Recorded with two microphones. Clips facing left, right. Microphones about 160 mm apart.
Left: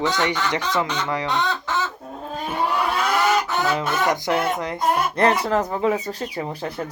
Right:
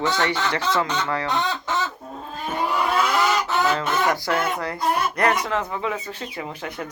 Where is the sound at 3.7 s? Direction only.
20° left (ahead or behind).